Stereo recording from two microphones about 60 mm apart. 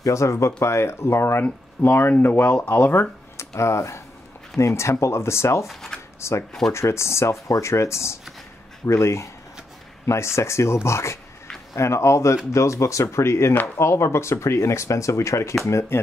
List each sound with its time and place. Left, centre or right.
0.0 s speech: left
1.8 s speech: left
2.5 s speech: left
2.9 s a sound: left
3.5 s speech: left
5.7 s speech: centre
6.2 s speech: left
15.9 s speech: left